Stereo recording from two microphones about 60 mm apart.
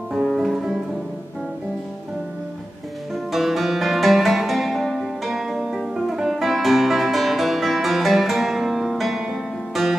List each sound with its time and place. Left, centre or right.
0.1 s music: centre
3.3 s music: centre